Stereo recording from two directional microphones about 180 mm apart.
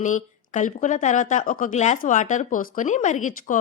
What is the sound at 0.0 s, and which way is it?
A woman's voice, 45° left (ahead or behind).